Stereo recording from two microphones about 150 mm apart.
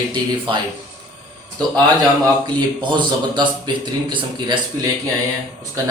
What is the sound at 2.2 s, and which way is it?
Speech, 30° right (ahead or behind).